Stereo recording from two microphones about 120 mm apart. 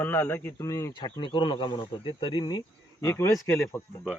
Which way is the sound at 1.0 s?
45° left (ahead or behind).